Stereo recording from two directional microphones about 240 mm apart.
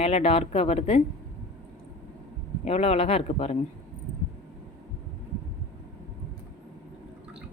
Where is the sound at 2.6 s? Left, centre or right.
Left.